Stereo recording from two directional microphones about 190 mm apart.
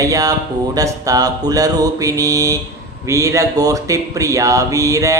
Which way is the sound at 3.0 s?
15° right (ahead or behind).